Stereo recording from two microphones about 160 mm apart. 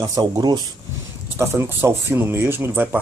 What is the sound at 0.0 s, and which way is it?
Speech, 20° right (ahead or behind).